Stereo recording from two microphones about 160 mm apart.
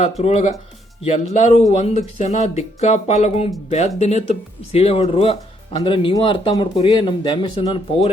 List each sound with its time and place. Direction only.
0.2 s speech: 40° left (ahead or behind)